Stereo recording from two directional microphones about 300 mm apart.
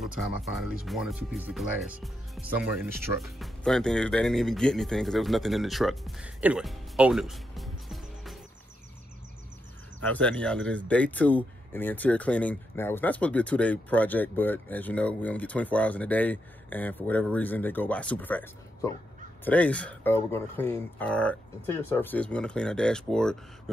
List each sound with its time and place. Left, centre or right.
0.0 s speech: centre
9.9 s speech: centre